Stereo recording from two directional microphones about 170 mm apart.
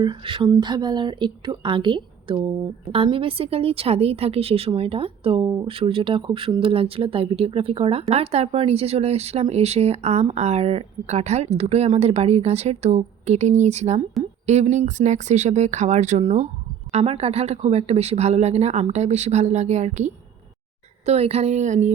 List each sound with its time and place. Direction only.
0.0 s a woman's voice: 30° right (ahead or behind); by 21.9 s 45° right (ahead or behind)